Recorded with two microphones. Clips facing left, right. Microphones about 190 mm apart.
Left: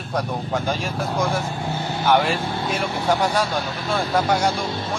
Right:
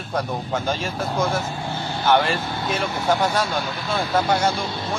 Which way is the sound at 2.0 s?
10° left (ahead or behind).